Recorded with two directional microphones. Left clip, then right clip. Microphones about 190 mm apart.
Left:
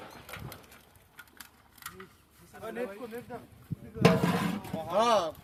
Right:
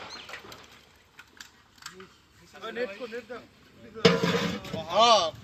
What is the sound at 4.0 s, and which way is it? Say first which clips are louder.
Speech: right 3 dB; 65° left (ahead or behind).